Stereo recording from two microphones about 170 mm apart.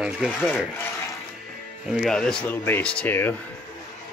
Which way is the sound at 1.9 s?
Centre (ahead or behind).